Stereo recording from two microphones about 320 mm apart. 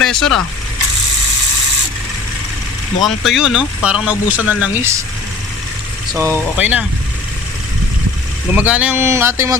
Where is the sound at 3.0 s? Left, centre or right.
Centre.